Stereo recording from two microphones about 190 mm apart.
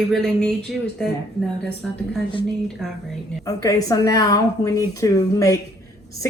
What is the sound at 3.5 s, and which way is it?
A woman's voice, 20° left (ahead or behind).